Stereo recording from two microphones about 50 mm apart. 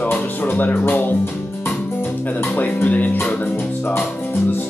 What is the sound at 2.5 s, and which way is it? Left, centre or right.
Music, left.